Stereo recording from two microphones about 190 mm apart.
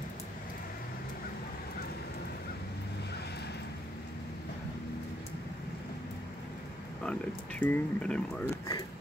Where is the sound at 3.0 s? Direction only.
60° left (ahead or behind).